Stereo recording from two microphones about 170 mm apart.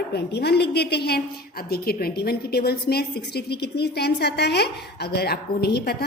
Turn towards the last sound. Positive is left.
turn(degrees=70)  # may be behind; listen again after turning